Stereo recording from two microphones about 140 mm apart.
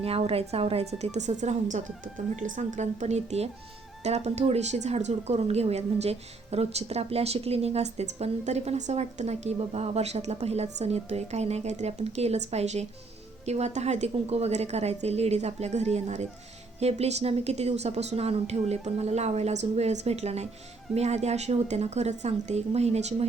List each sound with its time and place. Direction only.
0.0 s speech: 45° right (ahead or behind)